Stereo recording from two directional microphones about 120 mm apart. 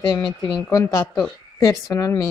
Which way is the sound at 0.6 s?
30° left (ahead or behind).